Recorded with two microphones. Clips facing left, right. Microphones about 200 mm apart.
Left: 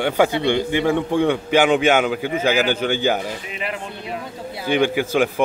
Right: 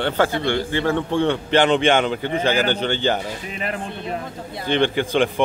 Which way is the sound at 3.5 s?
45° right (ahead or behind).